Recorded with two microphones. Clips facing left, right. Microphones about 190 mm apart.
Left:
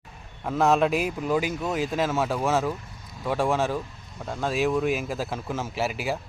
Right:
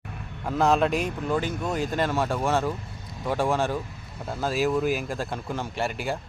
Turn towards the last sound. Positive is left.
turn(degrees=5)  # may be behind; listen again after turning